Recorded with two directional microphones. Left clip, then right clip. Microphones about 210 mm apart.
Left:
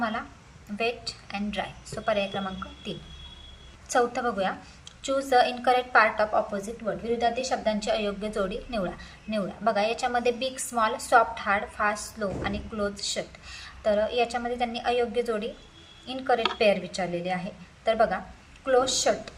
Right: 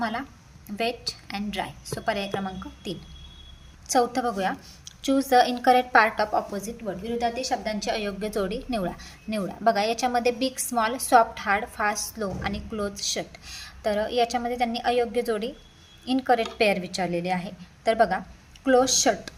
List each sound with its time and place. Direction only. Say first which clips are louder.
0.0 s a woman's voice: right 1 dB; 45° right (ahead or behind)